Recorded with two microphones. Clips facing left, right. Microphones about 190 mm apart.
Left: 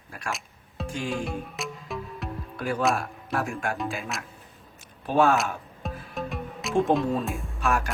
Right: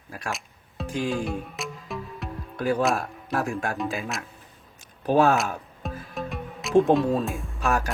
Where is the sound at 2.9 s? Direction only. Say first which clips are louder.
Right 1 dB; 40° right (ahead or behind).